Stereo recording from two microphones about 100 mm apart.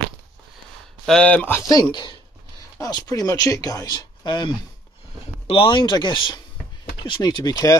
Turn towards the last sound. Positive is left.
turn(degrees=40)  # may be behind; listen again after turning